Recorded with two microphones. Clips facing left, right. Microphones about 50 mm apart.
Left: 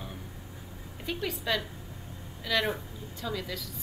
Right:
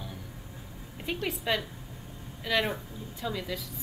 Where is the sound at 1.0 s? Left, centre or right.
Centre.